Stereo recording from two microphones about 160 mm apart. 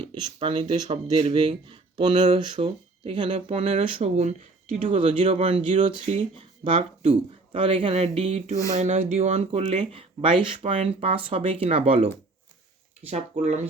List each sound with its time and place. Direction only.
0.1 s speech: 35° right (ahead or behind)
13.3 s speech: 45° right (ahead or behind)